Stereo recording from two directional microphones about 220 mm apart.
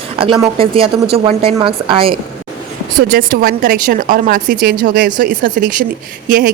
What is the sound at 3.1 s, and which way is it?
Speech, 40° right (ahead or behind).